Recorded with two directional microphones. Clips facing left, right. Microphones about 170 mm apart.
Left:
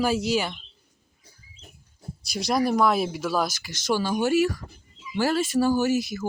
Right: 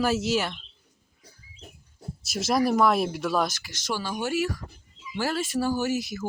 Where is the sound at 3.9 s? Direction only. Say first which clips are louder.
Left 6 dB; 35° left (ahead or behind).